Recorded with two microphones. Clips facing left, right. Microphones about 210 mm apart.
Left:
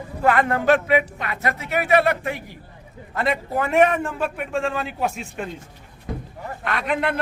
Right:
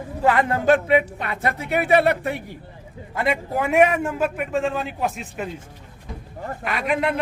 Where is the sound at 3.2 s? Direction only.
10° right (ahead or behind).